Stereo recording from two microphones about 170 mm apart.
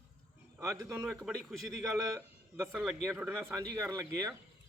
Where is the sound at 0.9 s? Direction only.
5° right (ahead or behind).